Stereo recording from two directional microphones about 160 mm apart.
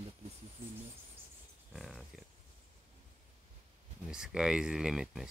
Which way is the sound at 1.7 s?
Centre (ahead or behind).